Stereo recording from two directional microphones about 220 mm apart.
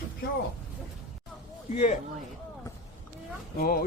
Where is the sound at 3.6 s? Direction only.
40° left (ahead or behind).